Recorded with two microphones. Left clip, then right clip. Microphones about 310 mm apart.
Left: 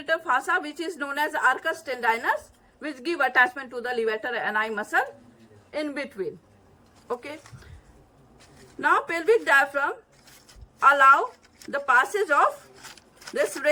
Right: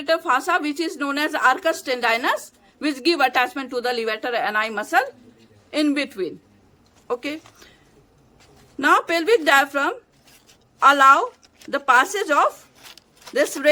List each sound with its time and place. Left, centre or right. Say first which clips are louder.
0.0 s a woman's voice: right 5 dB; centre
8.8 s a woman's voice: right 5 dB; centre